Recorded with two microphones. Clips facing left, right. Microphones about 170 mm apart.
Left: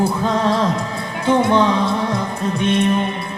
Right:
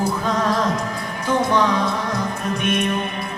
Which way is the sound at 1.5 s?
30° left (ahead or behind).